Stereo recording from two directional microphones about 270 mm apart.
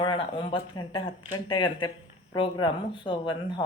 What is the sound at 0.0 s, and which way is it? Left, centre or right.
Speech, centre.